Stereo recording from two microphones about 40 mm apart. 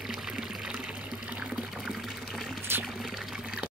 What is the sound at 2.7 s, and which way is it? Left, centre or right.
Pour, right.